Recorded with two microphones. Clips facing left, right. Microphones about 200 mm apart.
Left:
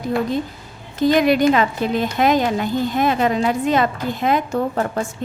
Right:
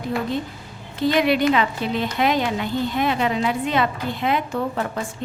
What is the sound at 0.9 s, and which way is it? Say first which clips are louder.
A woman's voice: left 4 dB; 45° left (ahead or behind).